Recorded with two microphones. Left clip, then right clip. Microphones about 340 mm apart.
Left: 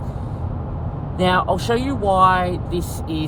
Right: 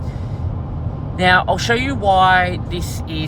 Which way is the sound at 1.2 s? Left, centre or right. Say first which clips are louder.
Right 4 dB; right.